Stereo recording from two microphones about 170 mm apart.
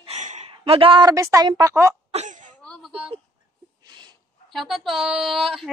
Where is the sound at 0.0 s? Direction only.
40° right (ahead or behind); by 2.0 s 15° right (ahead or behind).